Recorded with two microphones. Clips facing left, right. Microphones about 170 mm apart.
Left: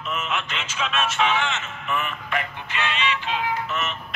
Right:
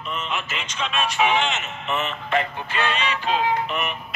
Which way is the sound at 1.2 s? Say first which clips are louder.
Right 4 dB; 15° right (ahead or behind).